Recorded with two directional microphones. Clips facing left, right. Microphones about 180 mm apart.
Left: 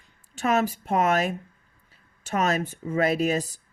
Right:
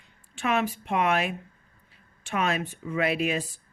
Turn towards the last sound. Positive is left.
turn(degrees=40)  # may be behind; listen again after turning